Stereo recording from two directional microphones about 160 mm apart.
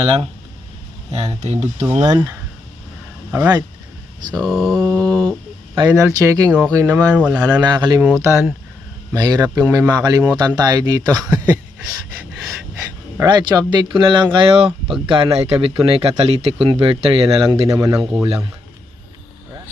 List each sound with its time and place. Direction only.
0.0 s speech: 35° right (ahead or behind)
2.0 s speech: 20° right (ahead or behind)
4.4 s mantra: centre (ahead or behind)
5.7 s speech: 20° right (ahead or behind)
7.6 s speech: 25° right (ahead or behind)
12.5 s a sound: 20° right (ahead or behind)
13.2 s speech: 30° right (ahead or behind)
17.7 s speech: 25° right (ahead or behind)